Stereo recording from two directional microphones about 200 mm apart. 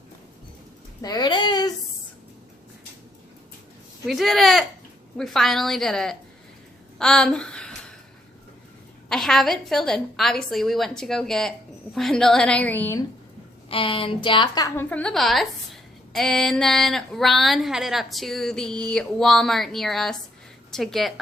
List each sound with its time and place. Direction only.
1.0 s a sound: 20° left (ahead or behind)
4.0 s a woman's voice: centre (ahead or behind)
7.0 s a sound: 5° left (ahead or behind)
9.0 s a woman's voice: centre (ahead or behind)
13.7 s a woman's voice: 25° left (ahead or behind)
14.8 s a woman's voice: 5° left (ahead or behind)